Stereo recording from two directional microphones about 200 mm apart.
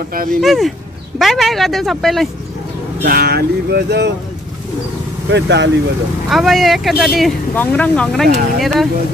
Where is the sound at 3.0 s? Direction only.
50° right (ahead or behind).